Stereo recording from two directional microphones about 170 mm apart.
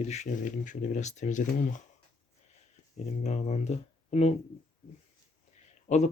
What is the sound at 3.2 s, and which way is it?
Speech, 40° left (ahead or behind).